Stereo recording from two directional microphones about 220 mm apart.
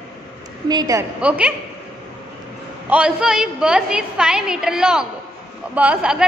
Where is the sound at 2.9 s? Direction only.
5° right (ahead or behind).